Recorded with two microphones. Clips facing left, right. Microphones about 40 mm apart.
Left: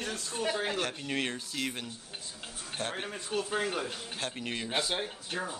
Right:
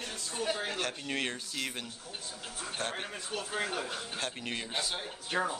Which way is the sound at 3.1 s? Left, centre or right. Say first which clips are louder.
Left 4 dB; centre.